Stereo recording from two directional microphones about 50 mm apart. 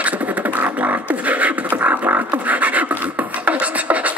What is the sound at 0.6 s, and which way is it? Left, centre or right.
Beatboxing, right.